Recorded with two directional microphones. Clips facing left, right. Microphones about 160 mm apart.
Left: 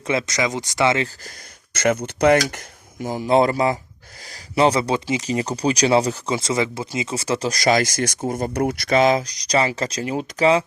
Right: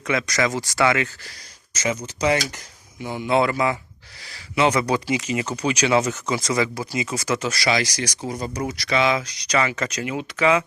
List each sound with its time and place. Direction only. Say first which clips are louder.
0.0 s speech: left 1 dB; 30° left (ahead or behind)
1.7 s speech: left 6 dB; 60° left (ahead or behind)
3.1 s speech: left 3 dB; 35° left (ahead or behind)
5.2 s speech: left 3 dB; 35° left (ahead or behind)